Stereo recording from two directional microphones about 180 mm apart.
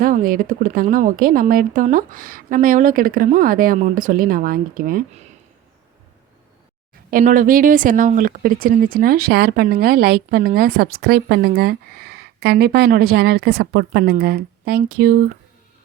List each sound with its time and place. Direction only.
0.0 s speech: 50° right (ahead or behind)
7.1 s speech: 50° right (ahead or behind)